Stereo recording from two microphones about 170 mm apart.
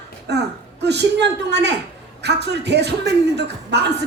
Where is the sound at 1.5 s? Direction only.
90° right.